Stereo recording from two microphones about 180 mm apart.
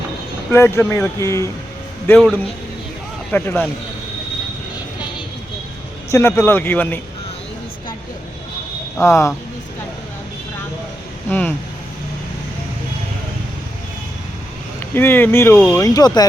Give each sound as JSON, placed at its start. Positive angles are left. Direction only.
{"t": 0.5, "sound": "speech", "side_deg": 15}
{"t": 2.0, "sound": "a man's voice", "side_deg": 5}
{"t": 6.1, "sound": "speech", "side_deg": 15}
{"t": 9.0, "sound": "speech", "side_deg": 15}
{"t": 11.3, "sound": "speech", "side_deg": 10}
{"t": 14.9, "sound": "speech", "side_deg": 10}